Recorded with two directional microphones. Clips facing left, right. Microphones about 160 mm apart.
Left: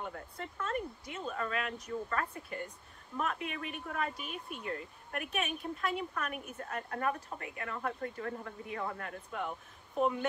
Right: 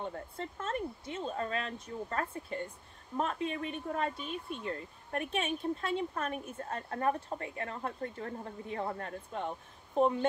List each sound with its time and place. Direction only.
0.1 s speech: 30° right (ahead or behind)